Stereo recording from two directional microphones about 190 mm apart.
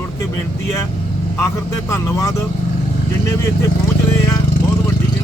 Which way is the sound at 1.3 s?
15° left (ahead or behind).